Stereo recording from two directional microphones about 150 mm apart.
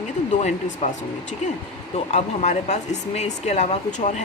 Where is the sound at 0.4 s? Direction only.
50° left (ahead or behind).